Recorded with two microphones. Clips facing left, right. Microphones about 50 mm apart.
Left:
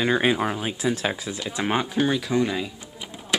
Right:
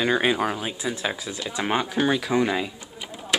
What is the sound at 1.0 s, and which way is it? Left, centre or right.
Speech, centre.